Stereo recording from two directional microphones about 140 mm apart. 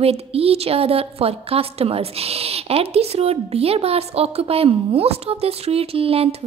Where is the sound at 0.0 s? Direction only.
45° right (ahead or behind).